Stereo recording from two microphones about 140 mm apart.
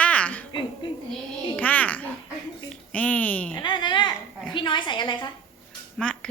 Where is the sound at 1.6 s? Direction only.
10° left (ahead or behind).